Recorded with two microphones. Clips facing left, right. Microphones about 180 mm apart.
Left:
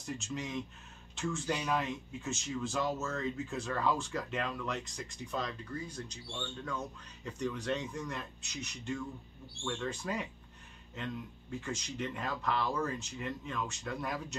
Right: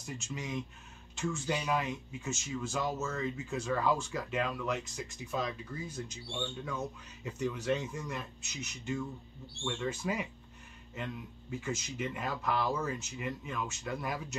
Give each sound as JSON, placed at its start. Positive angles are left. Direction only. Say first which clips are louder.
{"t": 0.0, "sound": "a man's voice", "louder": "left 2 dB", "side_deg": 0}